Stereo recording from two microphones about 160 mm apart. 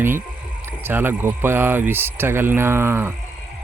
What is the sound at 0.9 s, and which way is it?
Speech, 15° right (ahead or behind).